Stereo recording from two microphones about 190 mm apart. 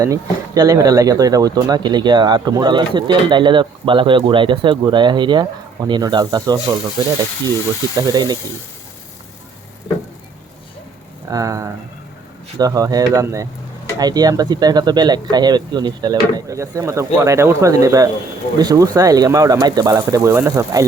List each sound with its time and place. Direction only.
0.0 s speech: 20° right (ahead or behind)
7.9 s speech: 20° right (ahead or behind)
11.3 s speech: 15° right (ahead or behind)